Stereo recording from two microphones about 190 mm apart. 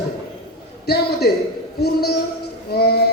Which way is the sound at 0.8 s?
55° left (ahead or behind).